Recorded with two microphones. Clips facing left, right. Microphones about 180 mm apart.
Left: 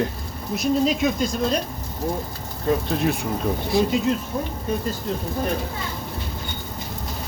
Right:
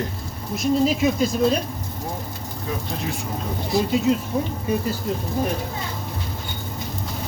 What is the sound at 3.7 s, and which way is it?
Speech, centre (ahead or behind).